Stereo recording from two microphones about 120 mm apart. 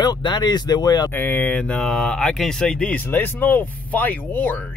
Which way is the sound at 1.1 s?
15° left (ahead or behind).